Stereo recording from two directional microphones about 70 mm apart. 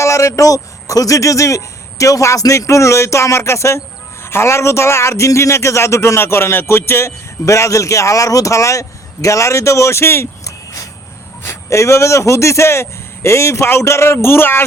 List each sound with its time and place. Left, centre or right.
0.0 s a man's voice: left